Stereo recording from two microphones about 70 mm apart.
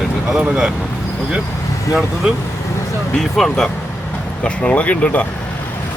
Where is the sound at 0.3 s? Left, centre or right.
Centre.